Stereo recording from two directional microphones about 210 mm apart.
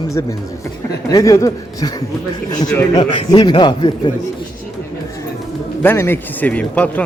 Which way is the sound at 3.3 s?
20° left (ahead or behind).